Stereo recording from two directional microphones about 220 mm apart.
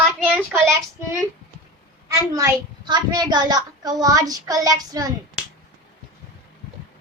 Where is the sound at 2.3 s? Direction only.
15° right (ahead or behind).